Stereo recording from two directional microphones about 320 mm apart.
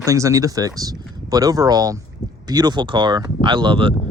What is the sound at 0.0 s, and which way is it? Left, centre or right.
Speech, centre.